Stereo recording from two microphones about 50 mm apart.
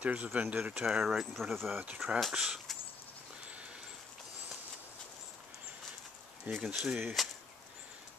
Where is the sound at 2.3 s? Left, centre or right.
Centre.